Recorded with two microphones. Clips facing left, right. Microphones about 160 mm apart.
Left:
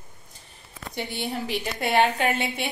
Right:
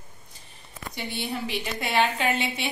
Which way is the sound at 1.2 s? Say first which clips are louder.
Left 1 dB; 50° left (ahead or behind).